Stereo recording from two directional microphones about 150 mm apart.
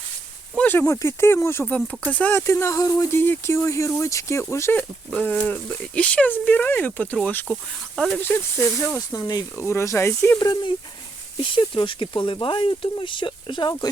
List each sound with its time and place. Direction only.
0.5 s speech: 10° left (ahead or behind)
8.2 s speech: 15° left (ahead or behind)
10.5 s speech: 35° left (ahead or behind)